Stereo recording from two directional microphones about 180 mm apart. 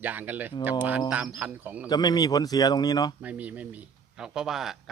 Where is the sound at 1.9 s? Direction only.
20° left (ahead or behind).